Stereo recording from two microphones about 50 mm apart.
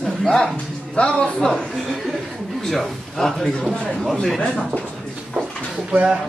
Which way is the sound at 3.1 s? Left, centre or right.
Centre.